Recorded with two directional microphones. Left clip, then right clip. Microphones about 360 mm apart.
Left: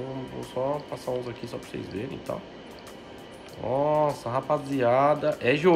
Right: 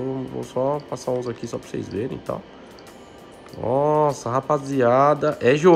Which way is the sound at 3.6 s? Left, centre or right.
Right.